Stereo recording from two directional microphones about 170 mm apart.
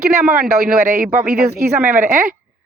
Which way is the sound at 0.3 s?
55° right (ahead or behind).